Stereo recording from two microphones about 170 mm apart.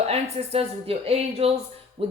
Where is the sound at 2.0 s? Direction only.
35° right (ahead or behind).